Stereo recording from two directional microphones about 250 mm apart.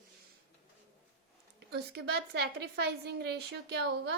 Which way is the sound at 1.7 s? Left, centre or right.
Right.